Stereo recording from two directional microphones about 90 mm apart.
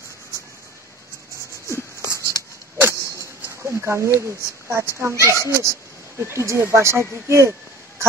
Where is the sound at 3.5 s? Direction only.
30° right (ahead or behind).